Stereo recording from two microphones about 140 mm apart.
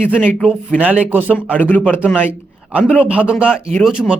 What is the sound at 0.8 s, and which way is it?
Speech, 10° right (ahead or behind).